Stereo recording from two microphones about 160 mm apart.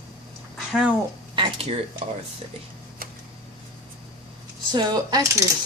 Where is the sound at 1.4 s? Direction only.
35° right (ahead or behind).